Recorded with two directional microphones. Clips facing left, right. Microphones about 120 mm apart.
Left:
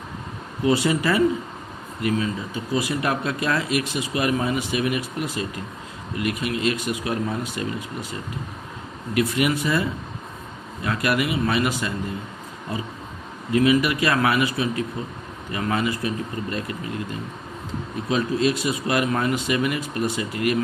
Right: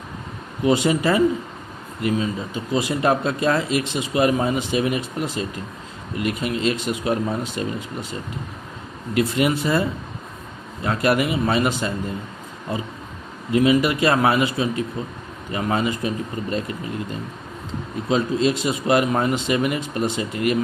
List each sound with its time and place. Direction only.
0.6 s speech: 20° right (ahead or behind)
9.1 s speech: 30° right (ahead or behind)
10.8 s speech: 30° right (ahead or behind)
13.5 s speech: 25° right (ahead or behind)
18.1 s speech: 25° right (ahead or behind)